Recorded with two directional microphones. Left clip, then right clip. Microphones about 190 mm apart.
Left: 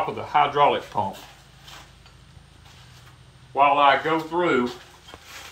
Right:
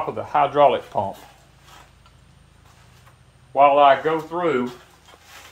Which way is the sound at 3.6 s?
45° right (ahead or behind).